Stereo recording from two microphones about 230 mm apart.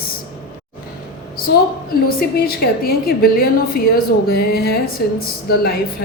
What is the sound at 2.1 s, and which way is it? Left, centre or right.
A woman's voice, left.